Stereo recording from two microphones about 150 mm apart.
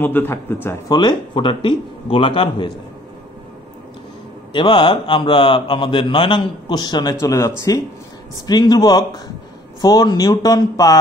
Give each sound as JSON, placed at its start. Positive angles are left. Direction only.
{"t": 0.0, "sound": "a man's voice", "side_deg": 15}
{"t": 0.8, "sound": "speech", "side_deg": 30}
{"t": 4.5, "sound": "speech", "side_deg": 35}